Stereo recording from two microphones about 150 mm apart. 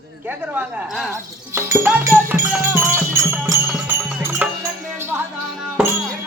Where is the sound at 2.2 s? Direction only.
15° right (ahead or behind).